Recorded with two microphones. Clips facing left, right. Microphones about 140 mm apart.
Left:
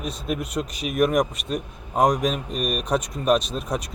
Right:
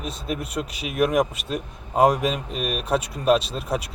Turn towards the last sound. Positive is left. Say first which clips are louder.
# right 1 dB
turn(degrees=-5)  # may be behind; listen again after turning